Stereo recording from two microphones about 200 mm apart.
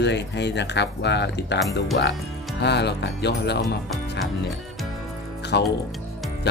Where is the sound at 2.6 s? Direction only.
55° left (ahead or behind).